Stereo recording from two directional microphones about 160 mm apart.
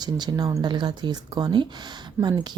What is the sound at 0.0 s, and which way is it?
Speech, 25° right (ahead or behind).